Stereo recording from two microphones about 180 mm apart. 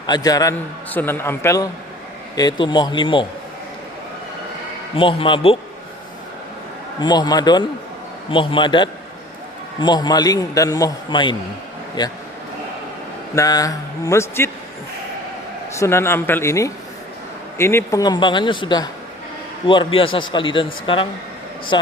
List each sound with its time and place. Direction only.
0.1 s a man's voice: 20° left (ahead or behind)
4.9 s a man's voice: 30° left (ahead or behind)
7.0 s a man's voice: 20° left (ahead or behind)
13.3 s a man's voice: 20° left (ahead or behind)
15.7 s a man's voice: 15° left (ahead or behind)